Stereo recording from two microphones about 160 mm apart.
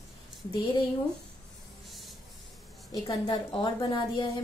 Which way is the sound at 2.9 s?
30° left (ahead or behind).